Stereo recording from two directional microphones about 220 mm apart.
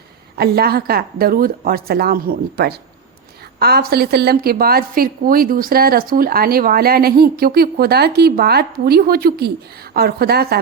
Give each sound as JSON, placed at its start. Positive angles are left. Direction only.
{"t": 0.3, "sound": "a woman's voice", "side_deg": -45}